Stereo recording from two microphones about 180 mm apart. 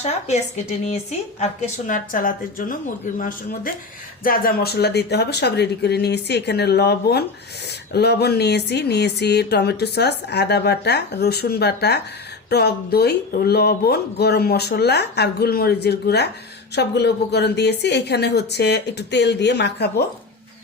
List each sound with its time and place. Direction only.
0.0 s a woman's voice: 40° left (ahead or behind); by 19.9 s 70° left (ahead or behind)